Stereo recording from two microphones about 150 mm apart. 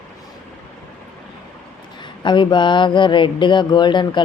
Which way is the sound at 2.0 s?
30° left (ahead or behind).